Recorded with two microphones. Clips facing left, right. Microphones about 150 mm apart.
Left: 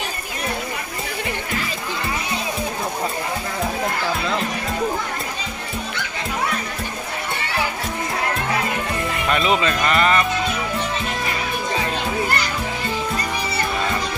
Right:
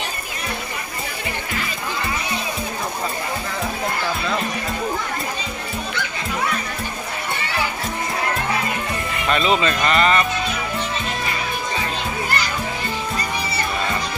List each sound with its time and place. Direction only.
9.3 s speech: 10° left (ahead or behind)